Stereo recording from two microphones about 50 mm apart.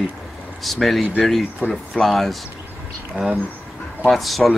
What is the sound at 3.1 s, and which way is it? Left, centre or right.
Speech, right.